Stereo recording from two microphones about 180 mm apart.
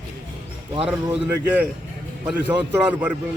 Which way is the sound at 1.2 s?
10° right (ahead or behind).